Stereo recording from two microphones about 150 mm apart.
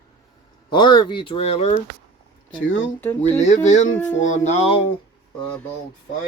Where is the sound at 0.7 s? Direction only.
30° left (ahead or behind).